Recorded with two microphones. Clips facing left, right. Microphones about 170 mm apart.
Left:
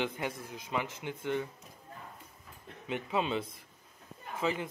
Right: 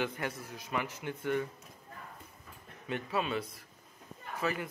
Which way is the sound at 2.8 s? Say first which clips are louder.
Left 1 dB; 15° left (ahead or behind).